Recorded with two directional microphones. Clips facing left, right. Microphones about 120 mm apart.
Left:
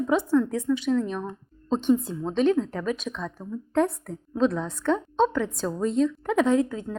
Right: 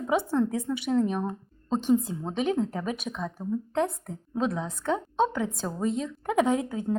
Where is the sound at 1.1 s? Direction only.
10° right (ahead or behind).